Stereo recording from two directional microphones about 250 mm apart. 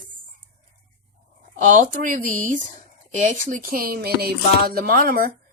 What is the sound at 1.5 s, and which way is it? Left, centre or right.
A woman's voice, right.